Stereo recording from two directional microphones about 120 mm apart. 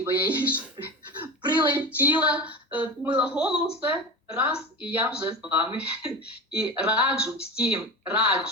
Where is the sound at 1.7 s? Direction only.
15° right (ahead or behind).